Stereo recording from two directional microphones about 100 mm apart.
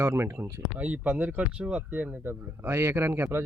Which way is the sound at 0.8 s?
15° right (ahead or behind).